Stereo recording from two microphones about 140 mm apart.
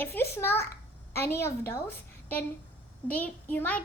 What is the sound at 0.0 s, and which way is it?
A child's voice, 15° left (ahead or behind).